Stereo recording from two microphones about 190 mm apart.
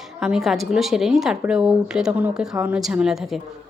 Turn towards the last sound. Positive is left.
turn(degrees=0)  # may be behind; listen again after turning